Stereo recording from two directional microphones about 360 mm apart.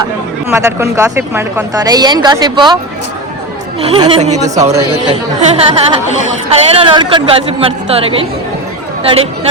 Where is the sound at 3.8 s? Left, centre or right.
Centre.